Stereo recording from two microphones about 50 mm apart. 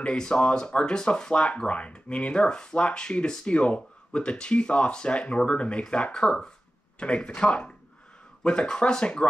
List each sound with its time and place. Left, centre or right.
0.0 s speech: centre